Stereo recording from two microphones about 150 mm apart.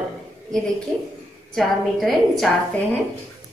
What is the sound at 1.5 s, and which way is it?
A woman's voice, centre (ahead or behind).